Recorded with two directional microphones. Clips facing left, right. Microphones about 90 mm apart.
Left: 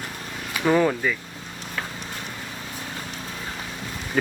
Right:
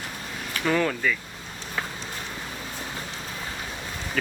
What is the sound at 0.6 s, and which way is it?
Speech, 15° left (ahead or behind).